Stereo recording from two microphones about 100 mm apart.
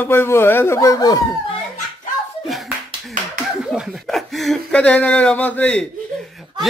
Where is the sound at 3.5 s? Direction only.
5° right (ahead or behind); by 5.9 s 10° left (ahead or behind).